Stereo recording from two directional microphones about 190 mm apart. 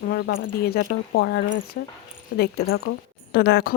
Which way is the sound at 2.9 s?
90° left.